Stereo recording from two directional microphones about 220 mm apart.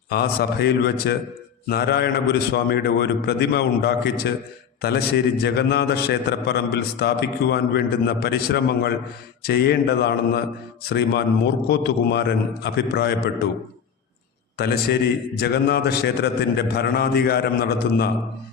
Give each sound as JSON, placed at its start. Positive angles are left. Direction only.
{"t": 0.1, "sound": "a man's voice", "side_deg": 45}
{"t": 15.4, "sound": "a man's voice", "side_deg": 45}